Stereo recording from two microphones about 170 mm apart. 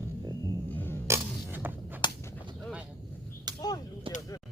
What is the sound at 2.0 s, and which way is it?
Whip, 25° left (ahead or behind).